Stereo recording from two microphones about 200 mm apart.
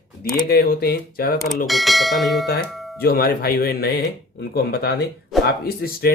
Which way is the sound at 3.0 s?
50° left (ahead or behind).